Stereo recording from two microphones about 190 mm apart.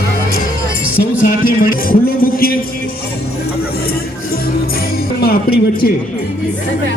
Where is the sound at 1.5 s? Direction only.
45° left (ahead or behind).